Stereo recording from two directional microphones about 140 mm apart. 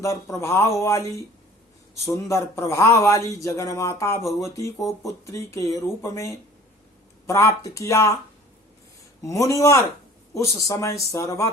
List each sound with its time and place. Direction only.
0.0 s speech: 20° left (ahead or behind)
9.2 s speech: 25° left (ahead or behind)